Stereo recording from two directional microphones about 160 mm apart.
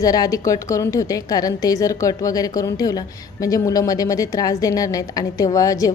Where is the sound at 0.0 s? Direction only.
25° left (ahead or behind).